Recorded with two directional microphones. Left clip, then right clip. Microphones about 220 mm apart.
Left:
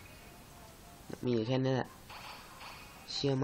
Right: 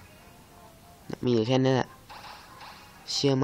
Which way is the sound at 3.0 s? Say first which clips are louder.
Right 8 dB; 35° right (ahead or behind).